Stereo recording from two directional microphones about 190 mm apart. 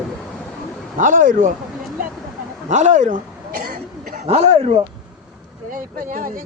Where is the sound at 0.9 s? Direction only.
45° right (ahead or behind).